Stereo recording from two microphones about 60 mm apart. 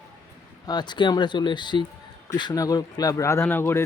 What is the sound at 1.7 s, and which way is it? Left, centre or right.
Speech, left.